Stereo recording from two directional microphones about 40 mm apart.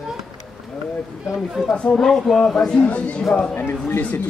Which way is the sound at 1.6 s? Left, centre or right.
Centre.